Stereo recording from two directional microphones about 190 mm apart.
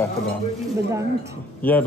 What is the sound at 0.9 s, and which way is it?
Speech, 15° right (ahead or behind).